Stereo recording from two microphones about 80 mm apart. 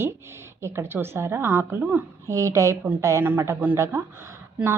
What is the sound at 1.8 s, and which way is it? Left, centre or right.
Speech, centre.